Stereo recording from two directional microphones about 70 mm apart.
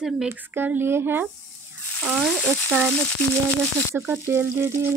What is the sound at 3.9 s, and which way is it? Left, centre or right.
Speech, right.